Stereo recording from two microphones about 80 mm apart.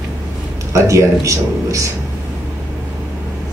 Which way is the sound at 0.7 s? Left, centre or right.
Right.